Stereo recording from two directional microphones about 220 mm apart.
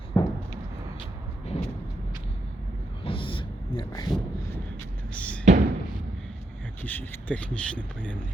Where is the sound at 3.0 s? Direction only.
25° left (ahead or behind).